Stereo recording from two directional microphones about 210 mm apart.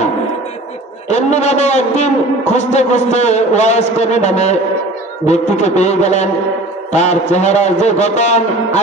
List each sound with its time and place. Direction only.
1.0 s a man's voice: 35° left (ahead or behind)